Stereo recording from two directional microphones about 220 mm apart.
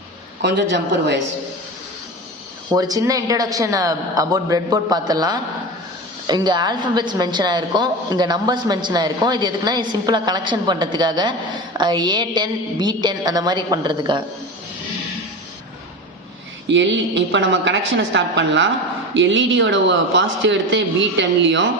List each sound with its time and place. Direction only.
0.4 s speech: 50° right (ahead or behind)
2.7 s a woman's voice: 15° right (ahead or behind)
16.6 s a man's voice: 55° right (ahead or behind)